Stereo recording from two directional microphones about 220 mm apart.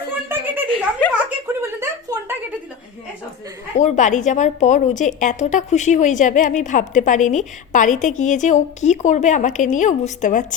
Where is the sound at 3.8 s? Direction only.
35° left (ahead or behind).